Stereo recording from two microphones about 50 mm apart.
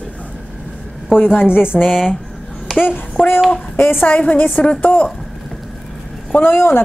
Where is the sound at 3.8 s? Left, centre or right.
Left.